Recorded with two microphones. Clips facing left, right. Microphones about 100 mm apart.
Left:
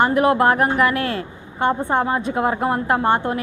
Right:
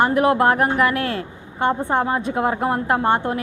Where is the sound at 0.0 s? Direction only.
20° left (ahead or behind).